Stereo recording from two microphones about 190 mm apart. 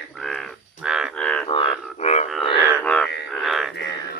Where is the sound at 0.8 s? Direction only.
5° right (ahead or behind).